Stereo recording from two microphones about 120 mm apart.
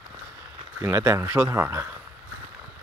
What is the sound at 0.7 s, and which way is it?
Speech, 20° right (ahead or behind).